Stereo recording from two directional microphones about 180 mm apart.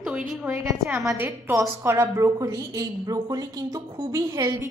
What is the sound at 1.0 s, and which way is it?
A woman's voice, 10° right (ahead or behind).